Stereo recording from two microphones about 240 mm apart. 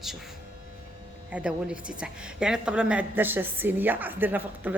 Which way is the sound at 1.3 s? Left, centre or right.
Centre.